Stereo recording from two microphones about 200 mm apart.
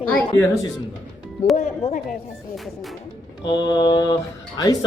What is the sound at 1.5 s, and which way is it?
Speech, 35° left (ahead or behind).